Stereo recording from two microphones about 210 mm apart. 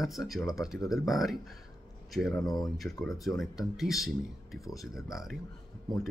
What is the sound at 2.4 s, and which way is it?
Speech, 20° left (ahead or behind).